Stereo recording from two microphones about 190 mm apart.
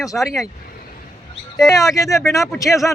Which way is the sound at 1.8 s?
15° left (ahead or behind).